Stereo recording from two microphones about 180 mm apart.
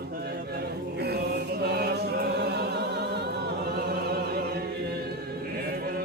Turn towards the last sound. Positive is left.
turn(degrees=-60)  # may be behind; listen again after turning